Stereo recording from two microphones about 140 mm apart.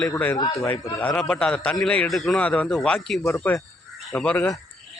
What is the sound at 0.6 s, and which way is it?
A man's voice, 10° left (ahead or behind).